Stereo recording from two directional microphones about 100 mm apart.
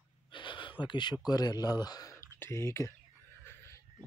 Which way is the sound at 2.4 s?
25° left (ahead or behind).